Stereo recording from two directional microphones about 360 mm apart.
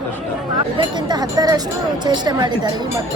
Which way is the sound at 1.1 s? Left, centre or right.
Centre.